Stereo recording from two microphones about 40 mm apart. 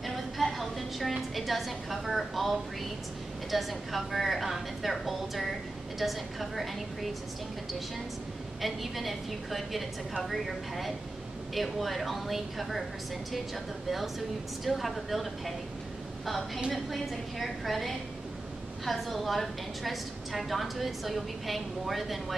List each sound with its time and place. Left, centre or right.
0.0 s a sound: centre
1.3 s a woman's voice: centre
8.5 s a woman's voice: centre
13.8 s a woman's voice: centre